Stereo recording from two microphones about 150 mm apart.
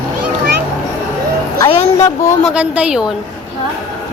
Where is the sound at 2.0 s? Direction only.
20° left (ahead or behind).